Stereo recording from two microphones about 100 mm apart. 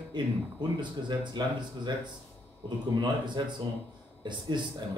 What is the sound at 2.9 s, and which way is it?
A man's voice, 50° right (ahead or behind).